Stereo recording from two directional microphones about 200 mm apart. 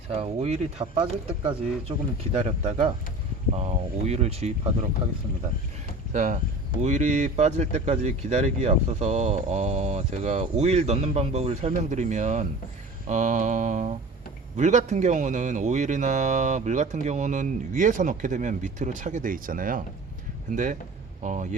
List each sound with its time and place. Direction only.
0.2 s speech: 30° right (ahead or behind)
2.4 s speech: 35° right (ahead or behind)
6.1 s speech: 40° right (ahead or behind)
21.2 s speech: 40° right (ahead or behind)